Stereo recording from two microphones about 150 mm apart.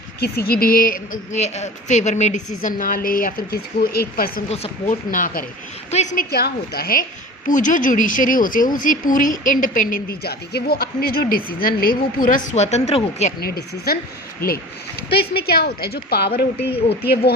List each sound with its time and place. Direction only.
0.2 s a woman's voice: 85° left
4.4 s speech: 45° left (ahead or behind)
5.1 s a woman's voice: 65° left (ahead or behind)
5.9 s speech: 50° left (ahead or behind)
6.1 s a woman's voice: 90° left
7.4 s a woman's voice: 60° left (ahead or behind)
13.4 s a woman's voice: 90° left
15.1 s a woman's voice: 90° left